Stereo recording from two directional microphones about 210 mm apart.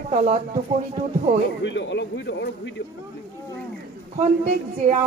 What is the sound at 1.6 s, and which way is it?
A man's voice, 55° left (ahead or behind).